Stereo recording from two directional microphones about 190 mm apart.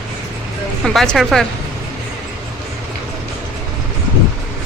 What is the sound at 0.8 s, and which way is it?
Speech, centre (ahead or behind).